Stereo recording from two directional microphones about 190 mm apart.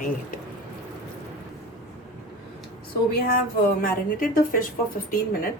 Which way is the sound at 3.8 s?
45° left (ahead or behind).